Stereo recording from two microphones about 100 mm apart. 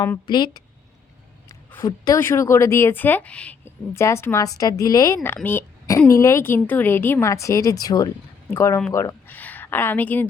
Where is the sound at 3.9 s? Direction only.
25° left (ahead or behind).